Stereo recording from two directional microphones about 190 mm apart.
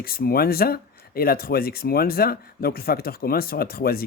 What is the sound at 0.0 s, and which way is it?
Speech, 50° left (ahead or behind).